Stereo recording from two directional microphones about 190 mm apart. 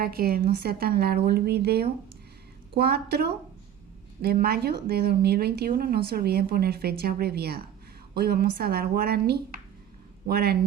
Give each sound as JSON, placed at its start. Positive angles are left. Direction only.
{"t": 0.0, "sound": "a woman's voice", "side_deg": -55}